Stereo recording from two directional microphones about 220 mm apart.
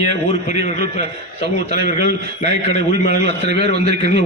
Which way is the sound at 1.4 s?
45° right (ahead or behind).